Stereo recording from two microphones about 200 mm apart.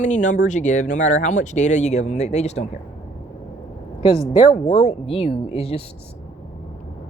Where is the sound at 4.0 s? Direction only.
25° left (ahead or behind).